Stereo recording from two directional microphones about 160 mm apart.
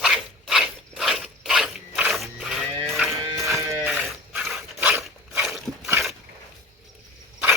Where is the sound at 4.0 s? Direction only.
5° right (ahead or behind).